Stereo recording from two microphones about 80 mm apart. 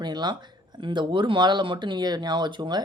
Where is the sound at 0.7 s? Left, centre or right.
Right.